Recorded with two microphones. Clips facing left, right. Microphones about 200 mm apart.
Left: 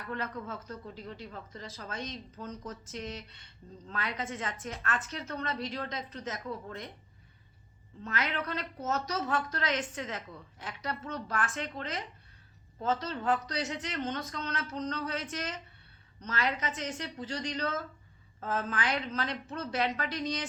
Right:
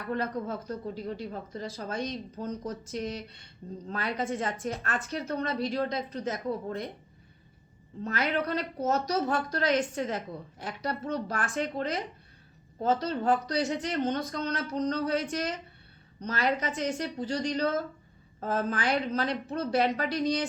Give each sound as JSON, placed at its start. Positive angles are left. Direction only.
{"t": 0.0, "sound": "speech", "side_deg": -35}
{"t": 2.0, "sound": "speech", "side_deg": -10}
{"t": 2.3, "sound": "speech", "side_deg": -35}
{"t": 8.0, "sound": "a woman's voice", "side_deg": -35}